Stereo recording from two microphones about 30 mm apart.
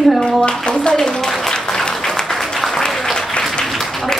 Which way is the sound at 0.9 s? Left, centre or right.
Centre.